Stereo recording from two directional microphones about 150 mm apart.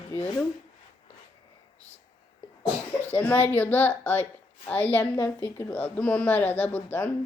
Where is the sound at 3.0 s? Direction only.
15° left (ahead or behind).